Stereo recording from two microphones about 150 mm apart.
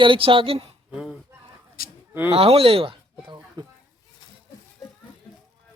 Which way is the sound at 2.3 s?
40° right (ahead or behind).